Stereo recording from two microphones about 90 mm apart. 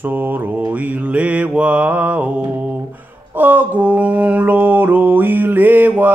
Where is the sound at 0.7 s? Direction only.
15° right (ahead or behind).